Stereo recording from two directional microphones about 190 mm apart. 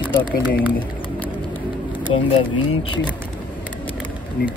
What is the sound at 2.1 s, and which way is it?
Speech, 25° left (ahead or behind).